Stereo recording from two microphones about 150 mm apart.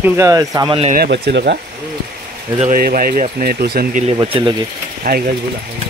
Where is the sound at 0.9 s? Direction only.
90° right.